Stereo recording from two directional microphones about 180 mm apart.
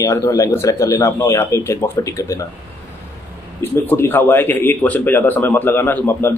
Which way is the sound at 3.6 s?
10° left (ahead or behind).